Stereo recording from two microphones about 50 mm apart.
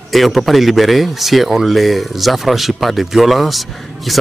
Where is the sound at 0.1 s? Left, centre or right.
Centre.